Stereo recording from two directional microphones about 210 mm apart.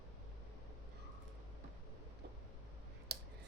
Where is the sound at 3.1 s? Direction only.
50° right (ahead or behind).